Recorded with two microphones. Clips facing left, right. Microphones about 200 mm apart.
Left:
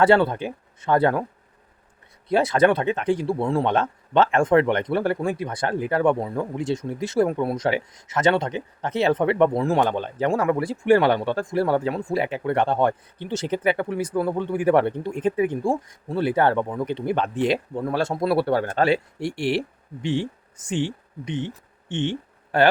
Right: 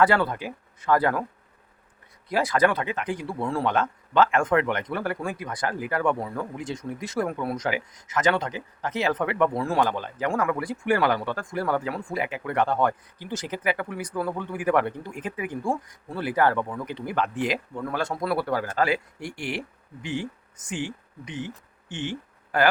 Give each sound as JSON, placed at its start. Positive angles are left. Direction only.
{"t": 0.0, "sound": "speech", "side_deg": 25}
{"t": 2.3, "sound": "speech", "side_deg": 25}